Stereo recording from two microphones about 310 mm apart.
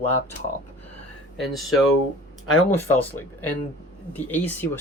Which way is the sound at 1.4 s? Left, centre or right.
Centre.